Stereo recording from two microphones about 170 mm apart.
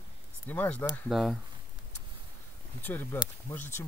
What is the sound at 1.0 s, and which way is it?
Speech, centre (ahead or behind).